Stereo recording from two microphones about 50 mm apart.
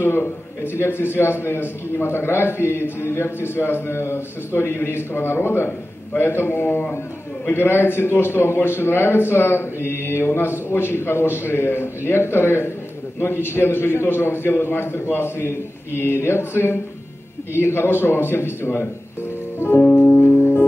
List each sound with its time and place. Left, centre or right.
0.0 s a man's voice: left
19.8 s music: left